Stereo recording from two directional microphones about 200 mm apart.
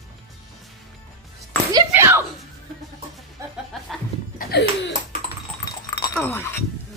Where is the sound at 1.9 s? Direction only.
10° right (ahead or behind).